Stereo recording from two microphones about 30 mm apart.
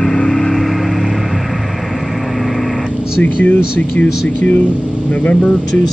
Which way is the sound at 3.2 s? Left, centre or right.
Left.